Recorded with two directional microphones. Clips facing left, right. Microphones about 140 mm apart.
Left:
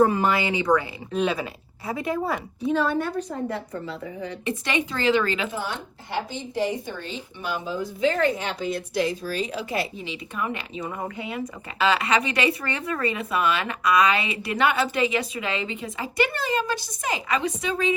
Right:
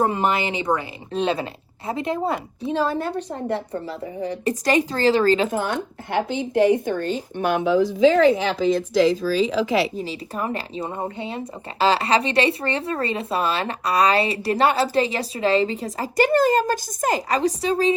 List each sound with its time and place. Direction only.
0.0 s speech: 20° right (ahead or behind); by 9.9 s 90° right
9.9 s speech: 40° right (ahead or behind)